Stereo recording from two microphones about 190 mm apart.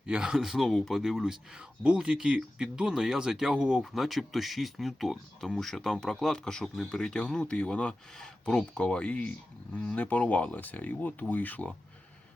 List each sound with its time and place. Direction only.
0.0 s speech: 5° right (ahead or behind)